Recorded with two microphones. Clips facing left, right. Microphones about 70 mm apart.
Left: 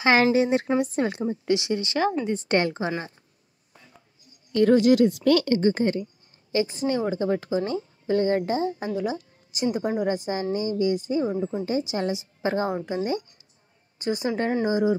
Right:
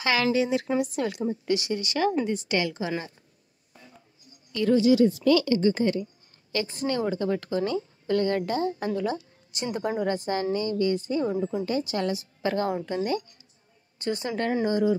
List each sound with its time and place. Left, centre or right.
0.2 s speech: left
0.9 s a woman's voice: left
4.5 s speech: left
6.5 s a woman's voice: left
9.9 s a woman's voice: centre
11.3 s a woman's voice: left
11.6 s a woman's voice: left
13.9 s a woman's voice: centre
14.3 s a woman's voice: left